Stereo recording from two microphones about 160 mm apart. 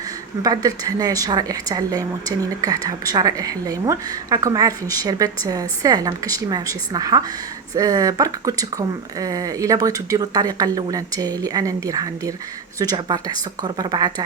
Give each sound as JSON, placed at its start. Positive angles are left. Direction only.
{"t": 0.4, "sound": "speech", "side_deg": -25}